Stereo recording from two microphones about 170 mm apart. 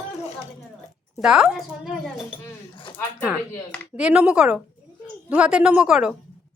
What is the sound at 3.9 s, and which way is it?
Speech, 5° right (ahead or behind).